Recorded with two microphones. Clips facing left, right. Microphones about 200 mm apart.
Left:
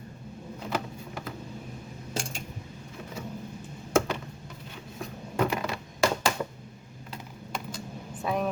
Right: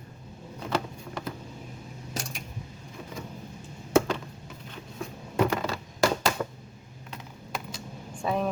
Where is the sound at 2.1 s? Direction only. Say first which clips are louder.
Left 2 dB; 30° left (ahead or behind).